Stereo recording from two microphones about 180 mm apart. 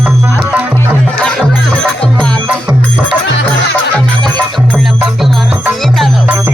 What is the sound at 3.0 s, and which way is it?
Speech, 80° left.